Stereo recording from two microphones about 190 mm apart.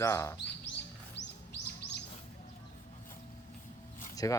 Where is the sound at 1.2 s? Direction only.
65° left (ahead or behind).